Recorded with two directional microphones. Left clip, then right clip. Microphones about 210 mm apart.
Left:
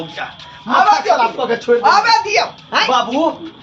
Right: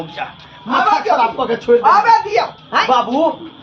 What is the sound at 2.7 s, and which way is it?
Speech, 35° left (ahead or behind).